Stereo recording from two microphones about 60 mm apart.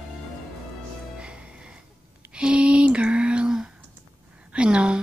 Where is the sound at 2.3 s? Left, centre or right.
Centre.